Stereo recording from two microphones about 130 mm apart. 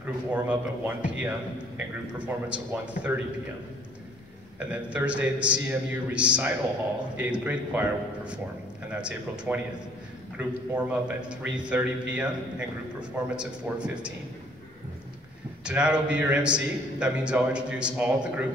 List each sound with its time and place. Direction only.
0.0 s a man's voice: 10° right (ahead or behind)
4.6 s a man's voice: 10° right (ahead or behind)
15.6 s a man's voice: 10° right (ahead or behind)